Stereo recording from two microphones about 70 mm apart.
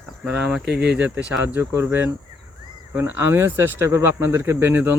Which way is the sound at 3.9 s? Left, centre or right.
Right.